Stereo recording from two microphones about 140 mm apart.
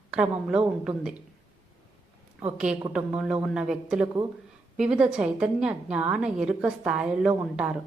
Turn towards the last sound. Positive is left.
turn(degrees=-10)  # may be behind; listen again after turning